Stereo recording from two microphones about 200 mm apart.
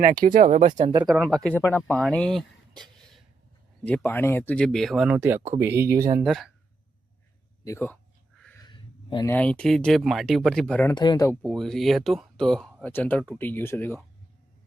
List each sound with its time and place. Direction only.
0.0 s speech: 45° right (ahead or behind)
1.0 s speech: centre (ahead or behind)
6.2 s speech: centre (ahead or behind)
7.6 s speech: 15° left (ahead or behind)
8.6 s a sound: 20° left (ahead or behind)
9.3 s speech: 5° left (ahead or behind)
10.9 s speech: 20° left (ahead or behind)
11.3 s speech: centre (ahead or behind)